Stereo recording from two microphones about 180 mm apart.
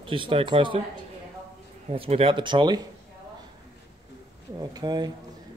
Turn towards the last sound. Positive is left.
turn(degrees=-25)  # may be behind; listen again after turning